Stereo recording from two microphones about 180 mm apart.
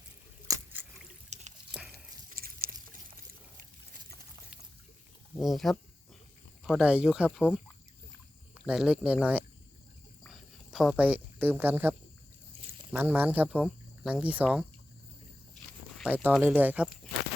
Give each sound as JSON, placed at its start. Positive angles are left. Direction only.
{"t": 0.4, "sound": "a sound", "side_deg": -15}
{"t": 1.3, "sound": "drip", "side_deg": -40}
{"t": 1.9, "sound": "a sound", "side_deg": -55}
{"t": 5.4, "sound": "speech", "side_deg": 0}
{"t": 8.6, "sound": "speech", "side_deg": -5}
{"t": 10.2, "sound": "a sound", "side_deg": 0}
{"t": 12.5, "sound": "pour", "side_deg": -30}
{"t": 12.9, "sound": "speech", "side_deg": -10}
{"t": 16.0, "sound": "speech", "side_deg": -10}